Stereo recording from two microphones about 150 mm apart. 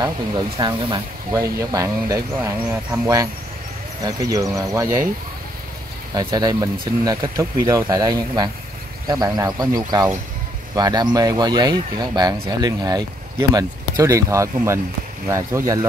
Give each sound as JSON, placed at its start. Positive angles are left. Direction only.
{"t": 0.6, "sound": "speech", "side_deg": -30}
{"t": 6.1, "sound": "speech", "side_deg": -25}